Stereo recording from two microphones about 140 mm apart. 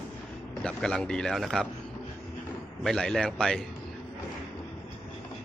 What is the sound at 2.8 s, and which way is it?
Speech, 5° left (ahead or behind).